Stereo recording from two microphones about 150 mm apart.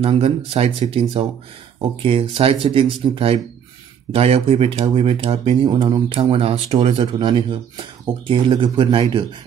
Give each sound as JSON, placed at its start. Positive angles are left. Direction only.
{"t": 0.0, "sound": "speech", "side_deg": -40}